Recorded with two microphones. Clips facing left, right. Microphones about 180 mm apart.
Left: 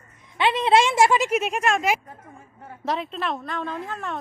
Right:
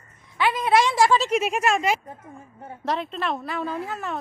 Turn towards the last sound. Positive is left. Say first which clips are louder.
# right 1 dB
turn(degrees=-5)  # may be behind; listen again after turning